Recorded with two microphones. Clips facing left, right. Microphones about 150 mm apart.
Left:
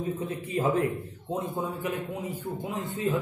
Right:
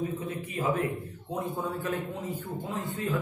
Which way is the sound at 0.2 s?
30° left (ahead or behind).